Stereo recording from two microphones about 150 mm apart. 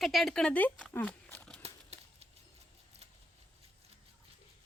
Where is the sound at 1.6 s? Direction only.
45° right (ahead or behind).